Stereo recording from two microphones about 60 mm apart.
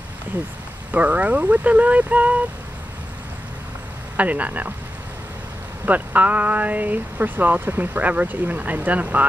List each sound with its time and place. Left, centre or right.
0.9 s speech: right
4.2 s speech: right
5.9 s speech: right